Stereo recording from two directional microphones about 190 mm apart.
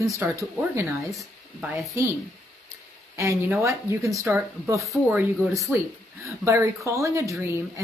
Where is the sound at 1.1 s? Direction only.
Centre (ahead or behind).